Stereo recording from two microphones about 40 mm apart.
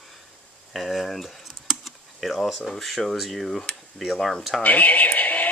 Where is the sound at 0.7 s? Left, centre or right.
Centre.